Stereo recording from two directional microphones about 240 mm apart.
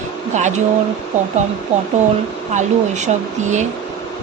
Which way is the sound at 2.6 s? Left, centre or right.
Right.